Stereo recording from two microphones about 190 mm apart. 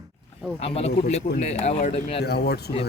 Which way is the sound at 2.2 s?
60° left (ahead or behind).